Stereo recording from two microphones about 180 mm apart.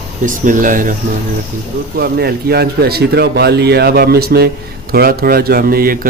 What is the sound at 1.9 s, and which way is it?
Speech, 60° right (ahead or behind).